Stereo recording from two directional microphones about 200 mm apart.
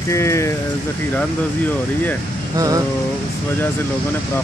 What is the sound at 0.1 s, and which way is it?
Speech, 15° left (ahead or behind).